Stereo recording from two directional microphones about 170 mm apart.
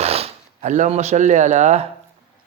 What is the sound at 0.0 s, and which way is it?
Speech, 35° right (ahead or behind).